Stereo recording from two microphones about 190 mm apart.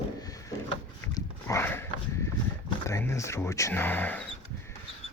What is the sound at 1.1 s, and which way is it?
Horse, 15° left (ahead or behind).